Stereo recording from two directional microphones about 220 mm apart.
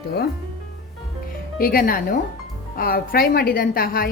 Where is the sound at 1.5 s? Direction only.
40° left (ahead or behind).